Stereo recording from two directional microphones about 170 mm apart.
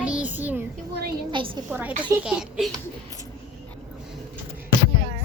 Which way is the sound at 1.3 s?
30° right (ahead or behind).